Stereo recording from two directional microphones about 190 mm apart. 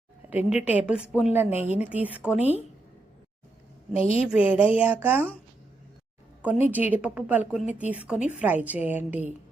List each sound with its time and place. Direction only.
0.3 s a woman's voice: 10° right (ahead or behind)
3.9 s a woman's voice: 30° left (ahead or behind)
4.3 s a woman's voice: 5° right (ahead or behind)
6.4 s a woman's voice: 10° right (ahead or behind)